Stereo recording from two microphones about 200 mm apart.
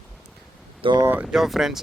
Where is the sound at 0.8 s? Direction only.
25° right (ahead or behind).